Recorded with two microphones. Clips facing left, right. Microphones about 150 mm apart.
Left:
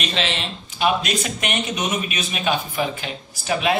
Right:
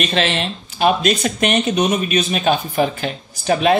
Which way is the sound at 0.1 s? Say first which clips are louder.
Right 6 dB; 50° right (ahead or behind).